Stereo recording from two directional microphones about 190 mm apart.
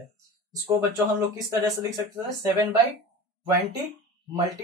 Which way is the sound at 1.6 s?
15° right (ahead or behind).